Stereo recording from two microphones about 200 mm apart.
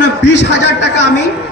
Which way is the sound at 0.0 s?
60° left (ahead or behind).